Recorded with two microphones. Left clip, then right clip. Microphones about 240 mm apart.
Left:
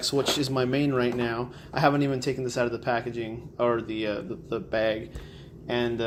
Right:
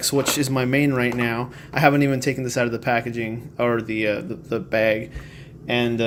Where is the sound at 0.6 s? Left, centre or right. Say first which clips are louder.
Right 6 dB; right.